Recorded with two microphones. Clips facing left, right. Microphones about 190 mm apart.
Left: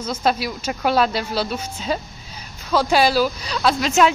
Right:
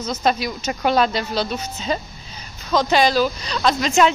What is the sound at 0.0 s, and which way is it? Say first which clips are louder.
Speech: even; 5° left (ahead or behind).